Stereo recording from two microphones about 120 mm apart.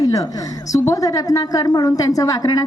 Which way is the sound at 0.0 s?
30° left (ahead or behind).